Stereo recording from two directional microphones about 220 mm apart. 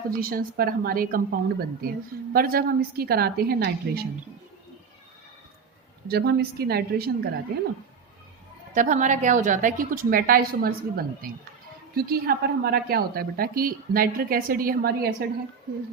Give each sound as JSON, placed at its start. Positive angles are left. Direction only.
{"t": 0.1, "sound": "a woman's voice", "side_deg": -40}
{"t": 6.1, "sound": "a woman's voice", "side_deg": -45}
{"t": 8.7, "sound": "speech", "side_deg": -35}